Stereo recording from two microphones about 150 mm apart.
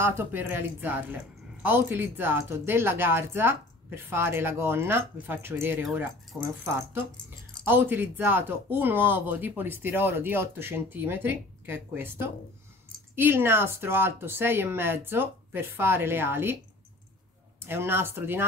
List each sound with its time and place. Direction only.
0.0 s speech: 15° right (ahead or behind)
17.6 s speech: 15° right (ahead or behind)